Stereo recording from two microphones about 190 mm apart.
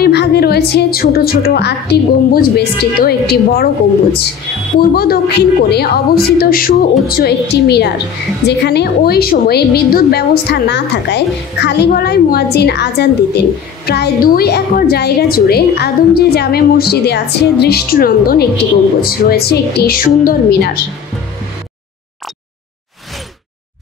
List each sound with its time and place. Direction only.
0.0 s a woman's voice: 60° left (ahead or behind)
4.7 s a woman's voice: 55° left (ahead or behind)